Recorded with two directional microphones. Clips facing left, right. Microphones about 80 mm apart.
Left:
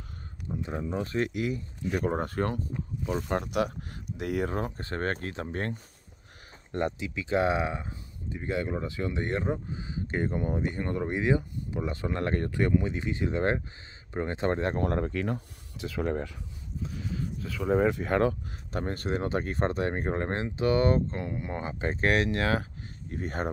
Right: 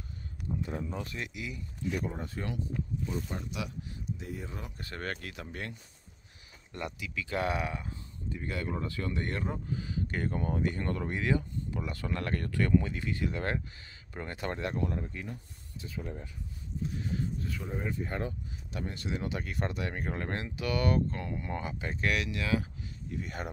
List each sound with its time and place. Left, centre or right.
0.5 s a sound: left
0.8 s speech: left
3.1 s speech: left
4.6 s speech: left
7.0 s speech: left
14.8 s speech: left
17.6 s speech: left
18.7 s speech: left